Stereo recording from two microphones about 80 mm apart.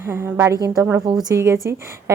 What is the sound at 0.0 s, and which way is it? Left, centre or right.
Speech, right.